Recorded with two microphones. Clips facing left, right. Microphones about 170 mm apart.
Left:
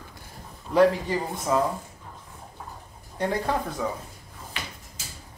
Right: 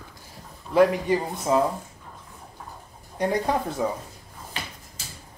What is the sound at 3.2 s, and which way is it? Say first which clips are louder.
Speech: right 2 dB; 15° right (ahead or behind).